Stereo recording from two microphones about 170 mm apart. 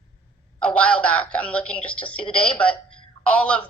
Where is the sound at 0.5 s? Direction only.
5° left (ahead or behind).